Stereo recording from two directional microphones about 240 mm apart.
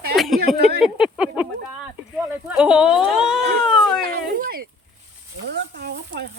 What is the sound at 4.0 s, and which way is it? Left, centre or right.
Speech, right.